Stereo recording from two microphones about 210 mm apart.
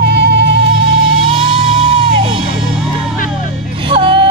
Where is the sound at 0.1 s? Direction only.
55° right (ahead or behind).